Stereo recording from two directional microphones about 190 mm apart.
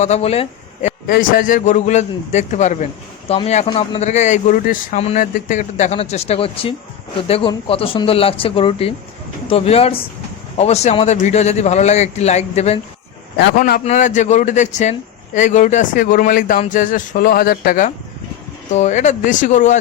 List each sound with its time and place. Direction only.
0.0 s speech: 35° left (ahead or behind)
1.1 s speech: 50° left (ahead or behind)
13.6 s speech: 50° left (ahead or behind)
13.8 s speech: 40° left (ahead or behind)